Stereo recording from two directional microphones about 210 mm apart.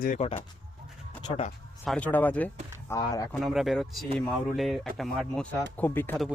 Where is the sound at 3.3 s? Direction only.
Centre (ahead or behind).